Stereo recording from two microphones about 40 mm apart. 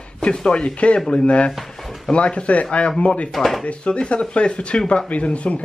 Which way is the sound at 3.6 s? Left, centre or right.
Left.